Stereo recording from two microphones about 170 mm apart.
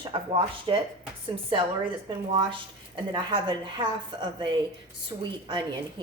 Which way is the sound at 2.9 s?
25° right (ahead or behind).